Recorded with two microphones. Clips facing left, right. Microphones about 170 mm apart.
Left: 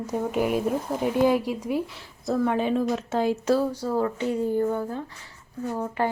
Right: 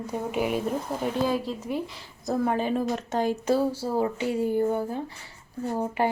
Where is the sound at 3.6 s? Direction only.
25° right (ahead or behind).